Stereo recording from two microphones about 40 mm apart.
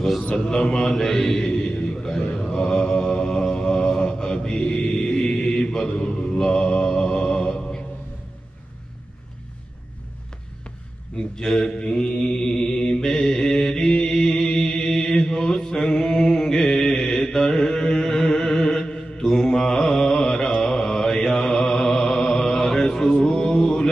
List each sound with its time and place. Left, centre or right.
0.5 s mantra: centre
11.3 s mantra: centre